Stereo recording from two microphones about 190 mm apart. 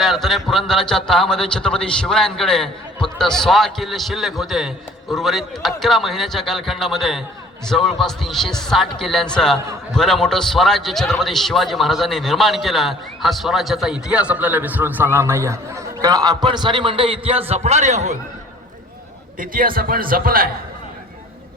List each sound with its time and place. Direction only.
0.0 s a man's voice: centre (ahead or behind); by 18.2 s 35° right (ahead or behind)
19.4 s a man's voice: 50° right (ahead or behind)